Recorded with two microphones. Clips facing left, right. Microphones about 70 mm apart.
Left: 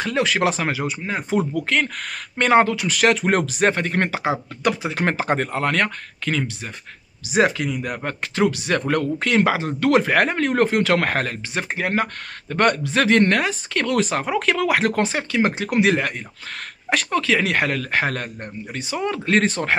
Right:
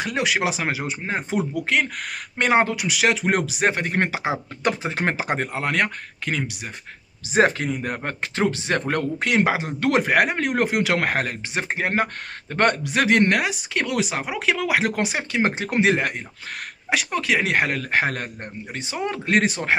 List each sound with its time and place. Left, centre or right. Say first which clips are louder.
0.0 s speech: left 3 dB; centre
1.5 s speech: left 1 dB; centre
2.9 s speech: left 3 dB; centre; by 5.1 s right
5.1 s speech: left 3 dB; centre
7.2 s speech: even; right; by 11.6 s centre
11.6 s speech: even; right